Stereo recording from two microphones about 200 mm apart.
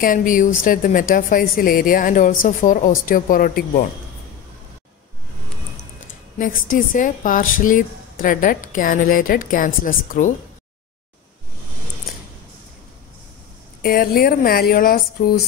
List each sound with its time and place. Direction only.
0.0 s speech: 40° left (ahead or behind)
6.3 s speech: 45° left (ahead or behind)
13.8 s speech: 50° left (ahead or behind)